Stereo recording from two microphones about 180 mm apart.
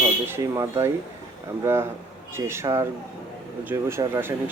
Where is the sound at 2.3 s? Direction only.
15° right (ahead or behind).